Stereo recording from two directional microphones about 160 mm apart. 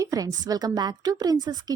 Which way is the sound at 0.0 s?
20° right (ahead or behind).